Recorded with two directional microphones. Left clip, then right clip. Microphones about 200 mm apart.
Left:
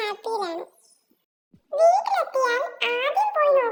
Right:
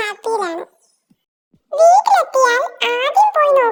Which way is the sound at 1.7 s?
40° right (ahead or behind).